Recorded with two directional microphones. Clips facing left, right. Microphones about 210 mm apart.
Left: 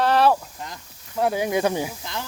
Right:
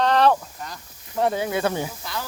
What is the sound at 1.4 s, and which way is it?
Speech, 15° left (ahead or behind).